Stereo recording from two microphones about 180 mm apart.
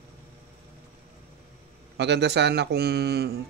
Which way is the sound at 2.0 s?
70° right (ahead or behind).